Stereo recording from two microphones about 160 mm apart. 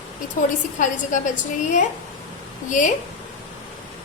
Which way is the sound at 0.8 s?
50° left (ahead or behind).